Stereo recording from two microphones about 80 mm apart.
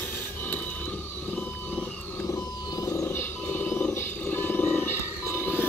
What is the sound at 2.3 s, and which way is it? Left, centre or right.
Vehicle, left.